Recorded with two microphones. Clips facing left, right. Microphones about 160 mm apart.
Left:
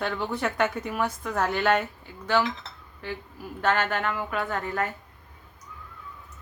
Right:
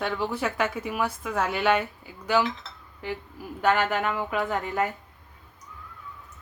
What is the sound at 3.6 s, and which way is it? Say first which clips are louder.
A woman's voice: right 2 dB; 15° right (ahead or behind).